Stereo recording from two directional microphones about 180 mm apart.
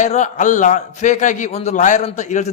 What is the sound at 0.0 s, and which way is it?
A man's voice, 45° left (ahead or behind).